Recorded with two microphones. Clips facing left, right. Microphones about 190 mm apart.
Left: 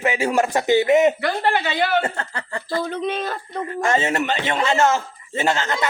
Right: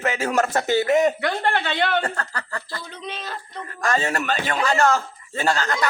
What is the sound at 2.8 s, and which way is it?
Speech, 55° left (ahead or behind).